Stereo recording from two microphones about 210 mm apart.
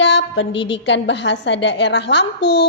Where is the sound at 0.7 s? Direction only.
55° left (ahead or behind).